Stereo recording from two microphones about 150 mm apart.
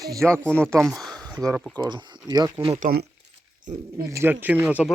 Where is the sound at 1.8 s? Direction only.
30° right (ahead or behind).